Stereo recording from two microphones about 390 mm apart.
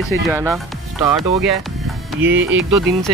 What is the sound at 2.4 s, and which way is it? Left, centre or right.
Speech, right.